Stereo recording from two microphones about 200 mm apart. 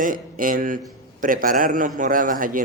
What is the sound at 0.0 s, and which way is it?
Speech, 45° right (ahead or behind).